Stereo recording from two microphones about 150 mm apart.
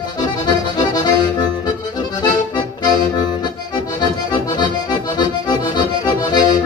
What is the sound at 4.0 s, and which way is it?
Accordion, 30° left (ahead or behind).